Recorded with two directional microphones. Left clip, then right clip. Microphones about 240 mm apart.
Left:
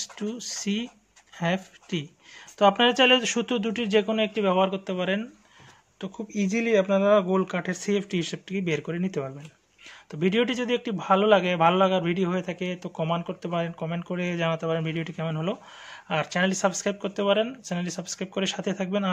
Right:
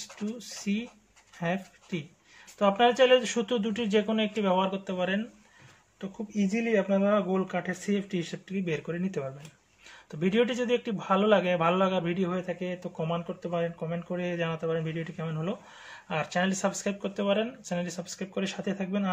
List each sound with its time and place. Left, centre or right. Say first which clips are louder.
0.0 s a man's voice: left 5 dB; left